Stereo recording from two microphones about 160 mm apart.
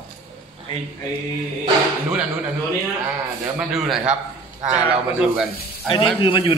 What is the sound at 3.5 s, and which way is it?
A man's voice, centre (ahead or behind).